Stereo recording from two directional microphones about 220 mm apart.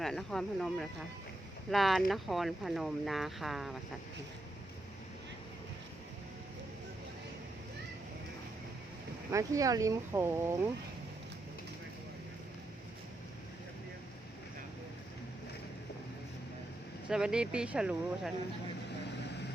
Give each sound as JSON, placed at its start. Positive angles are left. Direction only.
{"t": 0.0, "sound": "speech", "side_deg": 0}
{"t": 9.3, "sound": "speech", "side_deg": -15}
{"t": 17.1, "sound": "speech", "side_deg": -5}
{"t": 19.0, "sound": "vehicle", "side_deg": 50}